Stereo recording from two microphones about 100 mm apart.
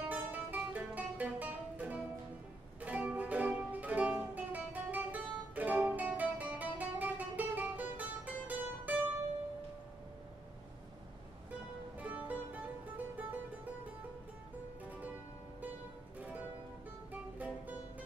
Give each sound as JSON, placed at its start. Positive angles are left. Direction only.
{"t": 0.1, "sound": "music", "side_deg": -15}
{"t": 12.0, "sound": "music", "side_deg": -15}
{"t": 16.2, "sound": "music", "side_deg": -15}